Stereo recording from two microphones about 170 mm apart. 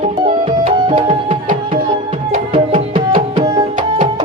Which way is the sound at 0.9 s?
30° right (ahead or behind).